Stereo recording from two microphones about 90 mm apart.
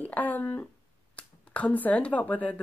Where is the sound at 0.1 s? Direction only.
20° left (ahead or behind).